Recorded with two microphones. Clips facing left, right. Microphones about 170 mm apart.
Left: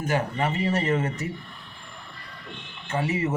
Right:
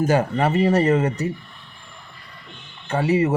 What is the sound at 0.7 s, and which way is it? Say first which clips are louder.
Speech: right 7 dB; 35° right (ahead or behind).